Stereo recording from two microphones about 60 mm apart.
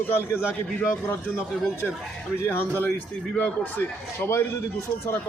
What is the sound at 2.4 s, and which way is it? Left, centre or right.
Speech, left.